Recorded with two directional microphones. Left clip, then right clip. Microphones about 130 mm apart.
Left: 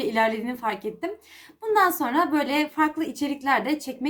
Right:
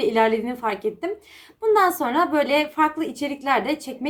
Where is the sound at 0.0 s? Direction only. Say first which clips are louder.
Right 4 dB; 30° left (ahead or behind).